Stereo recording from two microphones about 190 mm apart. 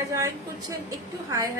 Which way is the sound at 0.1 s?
15° right (ahead or behind).